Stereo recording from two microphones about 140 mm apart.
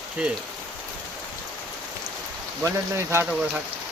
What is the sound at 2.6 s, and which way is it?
Speech, 20° right (ahead or behind).